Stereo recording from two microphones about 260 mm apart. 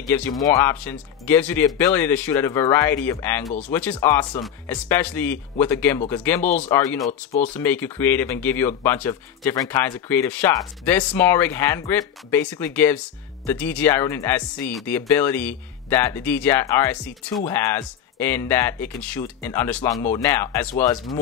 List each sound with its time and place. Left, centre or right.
0.1 s speech: centre